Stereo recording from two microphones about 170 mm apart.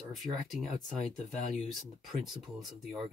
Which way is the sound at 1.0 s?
45° left (ahead or behind).